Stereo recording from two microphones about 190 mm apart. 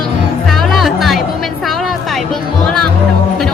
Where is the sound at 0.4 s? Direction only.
Centre (ahead or behind).